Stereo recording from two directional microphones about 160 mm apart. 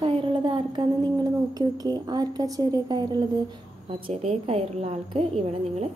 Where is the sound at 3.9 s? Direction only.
35° right (ahead or behind).